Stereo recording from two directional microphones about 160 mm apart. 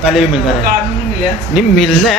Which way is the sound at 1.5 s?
Centre (ahead or behind).